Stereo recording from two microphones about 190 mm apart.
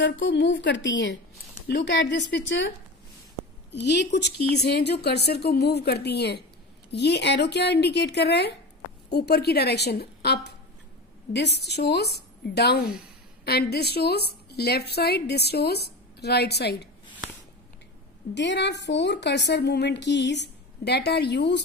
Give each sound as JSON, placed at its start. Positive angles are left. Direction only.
{"t": 0.0, "sound": "a woman's voice", "side_deg": 75}
{"t": 3.7, "sound": "a woman's voice", "side_deg": 65}
{"t": 18.3, "sound": "a woman's voice", "side_deg": 65}